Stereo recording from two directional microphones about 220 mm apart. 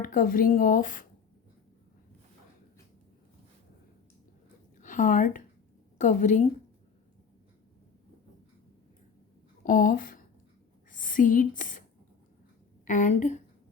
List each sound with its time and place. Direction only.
0.0 s a woman's voice: 40° left (ahead or behind)
4.8 s a woman's voice: 35° left (ahead or behind)
9.6 s speech: 40° left (ahead or behind)
12.8 s a woman's voice: 35° left (ahead or behind)